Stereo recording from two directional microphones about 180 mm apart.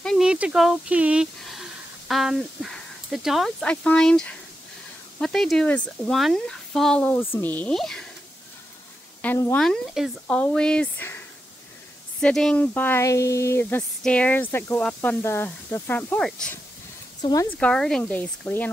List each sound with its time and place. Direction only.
0.0 s speech: centre (ahead or behind)
9.2 s speech: 10° left (ahead or behind)
17.2 s speech: 20° left (ahead or behind)
17.5 s speech: 5° left (ahead or behind)